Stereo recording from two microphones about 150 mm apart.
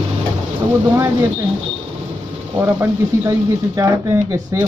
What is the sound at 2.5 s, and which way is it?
Speech, 20° right (ahead or behind).